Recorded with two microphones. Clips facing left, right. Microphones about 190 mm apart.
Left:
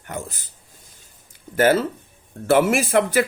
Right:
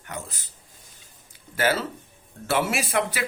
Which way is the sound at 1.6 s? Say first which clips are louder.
Left 7 dB; 50° left (ahead or behind).